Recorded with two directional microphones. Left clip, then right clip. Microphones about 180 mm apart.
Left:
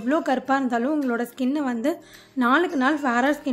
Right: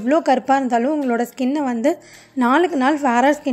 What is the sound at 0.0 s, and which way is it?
A woman's voice, 25° right (ahead or behind).